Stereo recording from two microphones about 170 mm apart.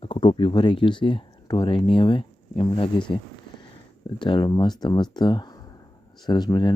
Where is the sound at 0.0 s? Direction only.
30° left (ahead or behind).